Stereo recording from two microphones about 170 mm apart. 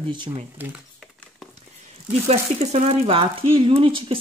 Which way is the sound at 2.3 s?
40° right (ahead or behind).